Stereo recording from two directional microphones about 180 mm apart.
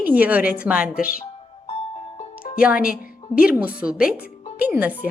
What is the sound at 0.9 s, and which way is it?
Speech, 55° left (ahead or behind).